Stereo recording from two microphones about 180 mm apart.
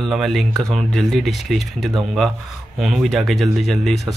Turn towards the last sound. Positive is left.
turn(degrees=0)  # may be behind; listen again after turning